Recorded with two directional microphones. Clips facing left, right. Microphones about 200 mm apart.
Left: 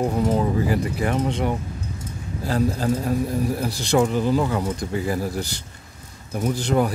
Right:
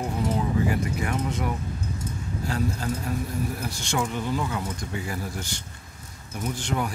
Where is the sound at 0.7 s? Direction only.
30° left (ahead or behind).